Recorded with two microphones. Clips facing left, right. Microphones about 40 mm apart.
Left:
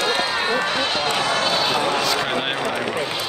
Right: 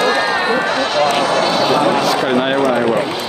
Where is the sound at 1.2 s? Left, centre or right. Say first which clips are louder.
Right 6 dB; right.